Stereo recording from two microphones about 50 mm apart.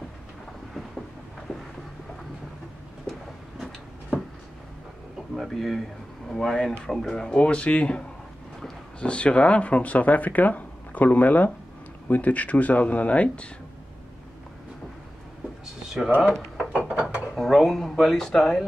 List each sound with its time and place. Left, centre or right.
3.1 s a sound: centre
5.3 s a sound: centre
6.2 s speech: centre
7.2 s speech: left
9.0 s speech: left
16.9 s mechanisms: right
17.4 s speech: centre